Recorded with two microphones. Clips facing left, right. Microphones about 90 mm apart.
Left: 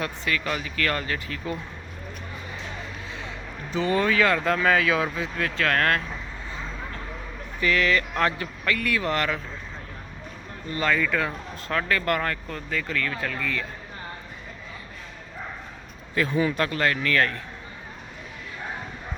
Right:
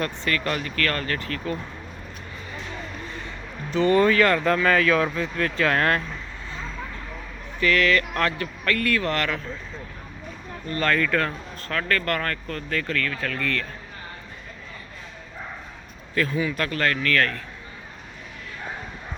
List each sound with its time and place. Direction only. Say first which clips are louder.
0.0 s speech: right 2 dB; 5° left (ahead or behind)
3.7 s speech: right 5 dB; 5° left (ahead or behind)
7.6 s speech: right 2 dB; 15° left (ahead or behind)
10.8 s speech: right 1 dB; 5° left (ahead or behind)
16.1 s speech: left 1 dB; 20° left (ahead or behind)